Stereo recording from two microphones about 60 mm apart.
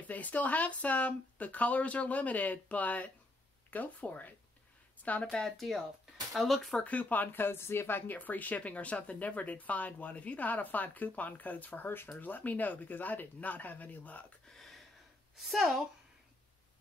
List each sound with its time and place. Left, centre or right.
0.0 s speech: left
6.3 s speech: centre
6.8 s speech: left
14.6 s a sound: centre
15.3 s a woman's voice: centre